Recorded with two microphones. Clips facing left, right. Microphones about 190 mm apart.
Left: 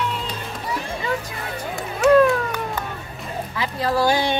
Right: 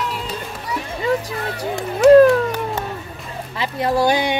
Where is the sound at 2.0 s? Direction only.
35° right (ahead or behind).